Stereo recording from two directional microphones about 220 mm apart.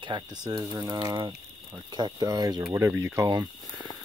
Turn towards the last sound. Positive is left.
turn(degrees=-15)  # may be behind; listen again after turning